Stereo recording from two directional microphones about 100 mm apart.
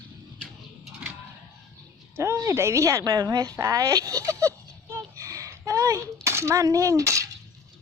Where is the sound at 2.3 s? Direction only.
30° right (ahead or behind).